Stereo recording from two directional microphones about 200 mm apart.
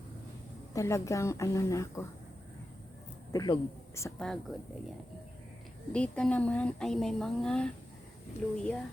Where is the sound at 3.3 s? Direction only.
20° left (ahead or behind).